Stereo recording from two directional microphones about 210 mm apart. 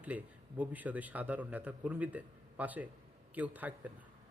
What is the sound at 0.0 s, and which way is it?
A man's voice, 5° right (ahead or behind).